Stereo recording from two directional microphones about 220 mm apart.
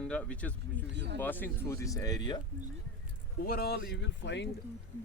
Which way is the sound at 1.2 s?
10° left (ahead or behind).